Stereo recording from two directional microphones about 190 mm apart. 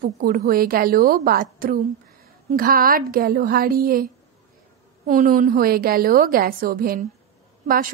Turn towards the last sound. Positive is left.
turn(degrees=-45)  # may be behind; listen again after turning